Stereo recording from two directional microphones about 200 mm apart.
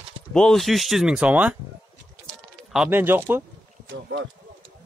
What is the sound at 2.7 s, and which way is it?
Speech, 5° right (ahead or behind).